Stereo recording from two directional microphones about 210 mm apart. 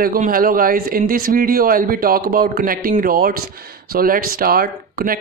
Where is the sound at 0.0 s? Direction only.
45° right (ahead or behind).